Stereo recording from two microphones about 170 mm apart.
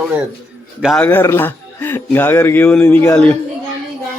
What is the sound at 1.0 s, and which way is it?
A man's voice, 15° left (ahead or behind).